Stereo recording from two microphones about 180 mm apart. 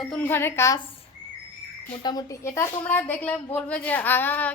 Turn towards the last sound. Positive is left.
turn(degrees=10)  # may be behind; listen again after turning